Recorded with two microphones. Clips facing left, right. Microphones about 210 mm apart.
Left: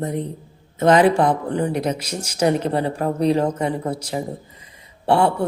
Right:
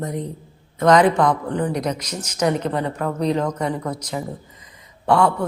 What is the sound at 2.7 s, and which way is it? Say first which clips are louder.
Speech: left 2 dB; 30° left (ahead or behind).